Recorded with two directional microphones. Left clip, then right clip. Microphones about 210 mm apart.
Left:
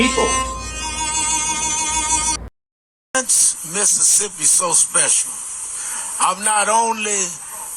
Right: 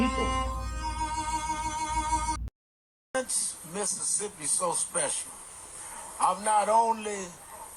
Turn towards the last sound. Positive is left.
turn(degrees=45)  # may be behind; listen again after turning